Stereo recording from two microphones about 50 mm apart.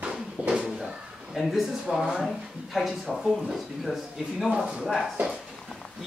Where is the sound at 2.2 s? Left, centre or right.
Centre.